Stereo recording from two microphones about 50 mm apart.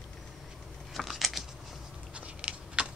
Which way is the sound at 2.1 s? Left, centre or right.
Right.